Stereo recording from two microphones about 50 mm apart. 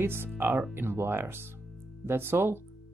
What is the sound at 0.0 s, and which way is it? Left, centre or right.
Speech, right.